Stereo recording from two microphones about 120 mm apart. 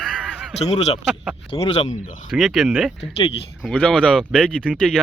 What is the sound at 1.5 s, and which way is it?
Speech, 50° left (ahead or behind).